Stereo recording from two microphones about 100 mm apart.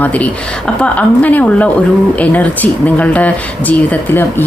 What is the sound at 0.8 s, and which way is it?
Speech, 15° left (ahead or behind).